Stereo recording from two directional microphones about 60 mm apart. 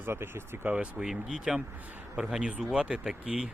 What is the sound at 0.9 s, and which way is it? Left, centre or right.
Speech, centre.